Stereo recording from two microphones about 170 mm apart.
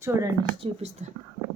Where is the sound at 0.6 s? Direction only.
30° right (ahead or behind).